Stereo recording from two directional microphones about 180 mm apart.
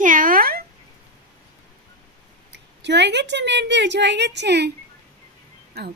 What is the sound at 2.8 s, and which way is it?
A woman's voice, 75° right (ahead or behind).